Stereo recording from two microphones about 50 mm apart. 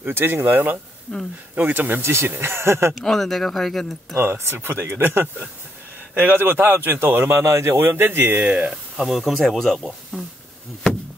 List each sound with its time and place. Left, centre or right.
0.0 s a man's voice: right
1.1 s speech: centre
1.5 s speech: right
2.0 s speech: right
2.9 s speech: centre
4.2 s a man's voice: right
6.3 s a man's voice: right
8.5 s speech: right
8.9 s speech: centre